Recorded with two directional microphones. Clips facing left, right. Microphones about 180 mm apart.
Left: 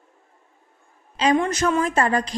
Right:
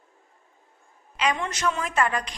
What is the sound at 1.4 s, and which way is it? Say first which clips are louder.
Speech: left 7 dB; 45° left (ahead or behind).